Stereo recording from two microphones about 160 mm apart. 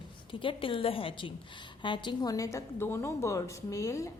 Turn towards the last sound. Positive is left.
turn(degrees=20)  # may be behind; listen again after turning